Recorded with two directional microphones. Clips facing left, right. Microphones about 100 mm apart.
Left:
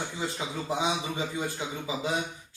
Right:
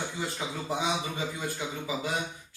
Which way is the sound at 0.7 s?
20° left (ahead or behind).